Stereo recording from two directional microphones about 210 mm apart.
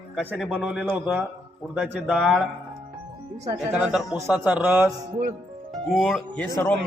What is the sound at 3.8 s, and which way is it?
A man's voice, centre (ahead or behind).